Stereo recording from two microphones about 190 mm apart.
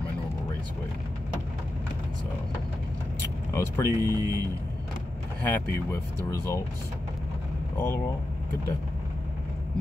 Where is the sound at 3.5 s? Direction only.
15° left (ahead or behind).